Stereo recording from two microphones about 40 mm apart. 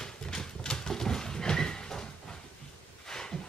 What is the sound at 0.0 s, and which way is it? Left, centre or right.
Horse, centre.